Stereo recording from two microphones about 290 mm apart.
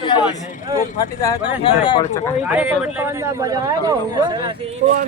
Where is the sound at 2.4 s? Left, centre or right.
Centre.